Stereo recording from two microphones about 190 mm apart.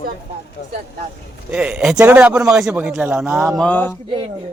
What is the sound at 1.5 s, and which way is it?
A man's voice, 5° right (ahead or behind).